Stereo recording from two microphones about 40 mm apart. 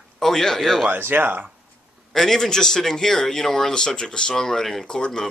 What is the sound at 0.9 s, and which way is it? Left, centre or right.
Speech, right.